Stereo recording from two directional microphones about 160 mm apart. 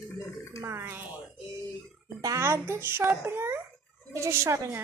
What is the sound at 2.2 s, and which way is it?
A woman's voice, 15° right (ahead or behind).